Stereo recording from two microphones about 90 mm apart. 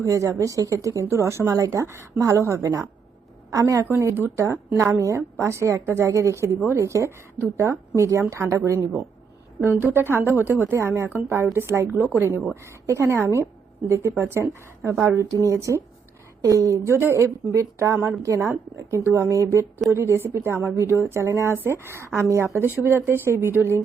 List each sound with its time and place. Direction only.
0.0 s speech: 35° right (ahead or behind)
9.6 s a woman's voice: 25° right (ahead or behind)
11.9 s a woman's voice: 20° right (ahead or behind)
12.8 s a woman's voice: 30° right (ahead or behind)